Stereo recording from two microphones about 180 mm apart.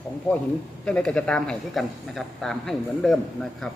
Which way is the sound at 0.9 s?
5° left (ahead or behind).